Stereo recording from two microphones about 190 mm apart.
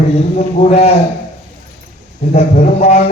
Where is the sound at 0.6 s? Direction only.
35° left (ahead or behind).